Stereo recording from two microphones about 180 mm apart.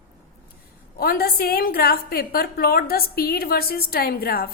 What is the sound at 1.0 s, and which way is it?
A woman's voice, 55° left (ahead or behind).